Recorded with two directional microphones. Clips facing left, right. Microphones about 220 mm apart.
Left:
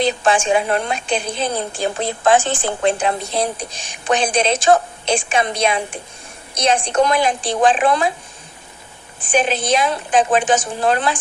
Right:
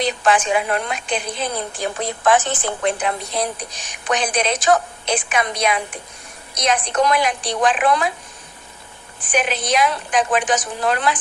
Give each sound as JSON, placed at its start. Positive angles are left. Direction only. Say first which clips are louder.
{"t": 0.0, "sound": "a woman's voice", "louder": "left 2 dB", "side_deg": 30}
{"t": 9.2, "sound": "a woman's voice", "louder": "left 3 dB", "side_deg": 30}